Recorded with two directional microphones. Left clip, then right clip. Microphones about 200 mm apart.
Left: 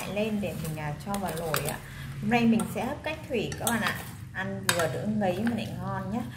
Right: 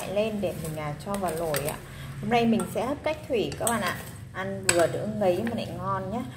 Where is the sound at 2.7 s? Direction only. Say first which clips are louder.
Right 4 dB; 15° right (ahead or behind).